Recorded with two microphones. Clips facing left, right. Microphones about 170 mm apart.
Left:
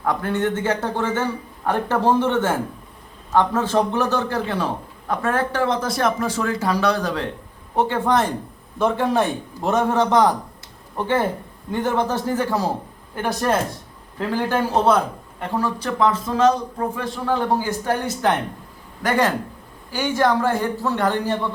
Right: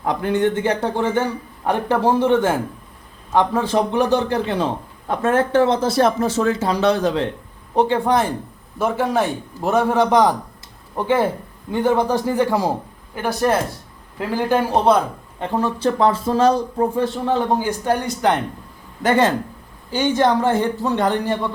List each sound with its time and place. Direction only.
0.0 s a man's voice: 20° right (ahead or behind)